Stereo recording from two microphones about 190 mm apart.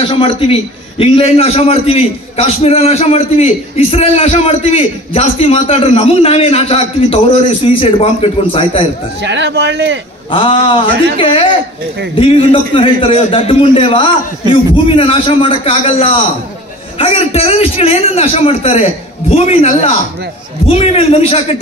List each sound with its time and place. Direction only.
0.0 s a man's voice: 30° left (ahead or behind)
9.2 s speech: 65° right (ahead or behind)
10.3 s a man's voice: 30° left (ahead or behind)